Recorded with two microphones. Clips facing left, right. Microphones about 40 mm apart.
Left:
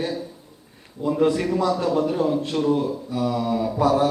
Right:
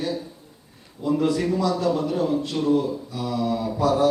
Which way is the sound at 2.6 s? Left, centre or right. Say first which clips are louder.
Right 2 dB; left.